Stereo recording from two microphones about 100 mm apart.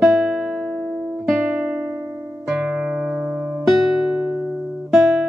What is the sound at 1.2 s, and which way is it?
Guitar, 10° right (ahead or behind).